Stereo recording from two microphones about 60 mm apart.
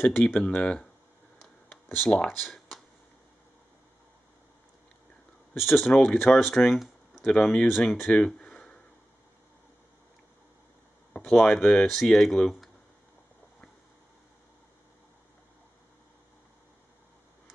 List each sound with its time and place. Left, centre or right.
0.2 s speech: centre
1.7 s a sound: left
2.0 s speech: centre
5.6 s speech: centre
5.9 s speech: centre
7.3 s speech: centre
8.3 s a sound: centre
11.1 s speech: centre
11.9 s speech: centre